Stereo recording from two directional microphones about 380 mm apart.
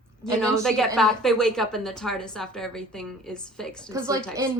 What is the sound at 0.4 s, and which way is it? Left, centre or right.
A woman's voice, centre.